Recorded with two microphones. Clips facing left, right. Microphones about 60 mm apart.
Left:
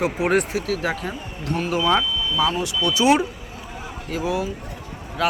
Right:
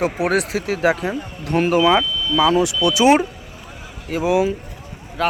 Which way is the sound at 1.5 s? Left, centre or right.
Right.